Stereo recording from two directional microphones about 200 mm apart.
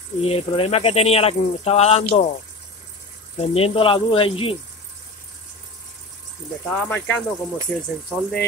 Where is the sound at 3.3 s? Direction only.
30° left (ahead or behind).